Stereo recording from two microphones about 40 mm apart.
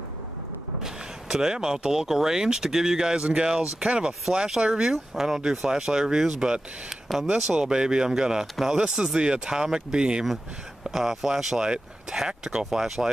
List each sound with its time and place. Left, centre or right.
0.8 s speech: centre
5.1 s speech: centre
10.9 s speech: centre
12.3 s speech: right
12.7 s speech: centre